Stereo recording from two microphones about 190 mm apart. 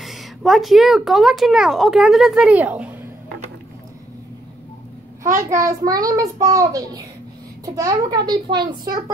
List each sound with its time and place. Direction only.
0.0 s speech: centre (ahead or behind)
5.2 s a child's voice: 15° right (ahead or behind)
5.7 s child singing: 20° right (ahead or behind)